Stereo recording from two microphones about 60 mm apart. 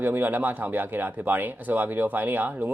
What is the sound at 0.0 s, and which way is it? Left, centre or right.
Speech, right.